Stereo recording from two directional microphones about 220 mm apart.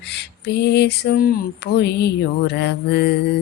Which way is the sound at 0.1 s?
50° left (ahead or behind).